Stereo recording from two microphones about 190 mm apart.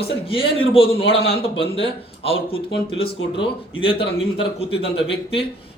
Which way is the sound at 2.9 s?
30° left (ahead or behind).